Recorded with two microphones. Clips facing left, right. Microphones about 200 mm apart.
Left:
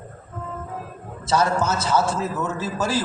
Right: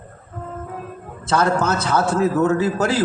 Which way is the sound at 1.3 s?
55° right (ahead or behind).